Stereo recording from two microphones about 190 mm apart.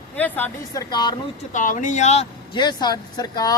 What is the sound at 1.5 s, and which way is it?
Speech, 40° left (ahead or behind).